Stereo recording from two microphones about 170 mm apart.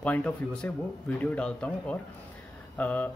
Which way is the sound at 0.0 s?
10° left (ahead or behind).